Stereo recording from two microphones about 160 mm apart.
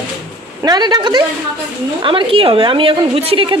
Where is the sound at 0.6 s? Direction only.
25° right (ahead or behind).